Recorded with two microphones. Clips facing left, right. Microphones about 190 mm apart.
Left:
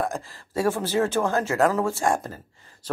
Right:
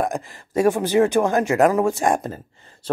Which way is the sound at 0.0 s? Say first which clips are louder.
Right 4 dB; 15° right (ahead or behind).